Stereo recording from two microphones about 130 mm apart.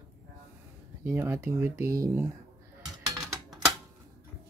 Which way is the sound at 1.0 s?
20° right (ahead or behind).